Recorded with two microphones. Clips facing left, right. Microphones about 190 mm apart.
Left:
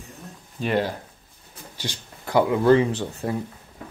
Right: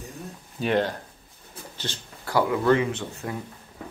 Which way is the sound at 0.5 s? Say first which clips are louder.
Even; centre (ahead or behind).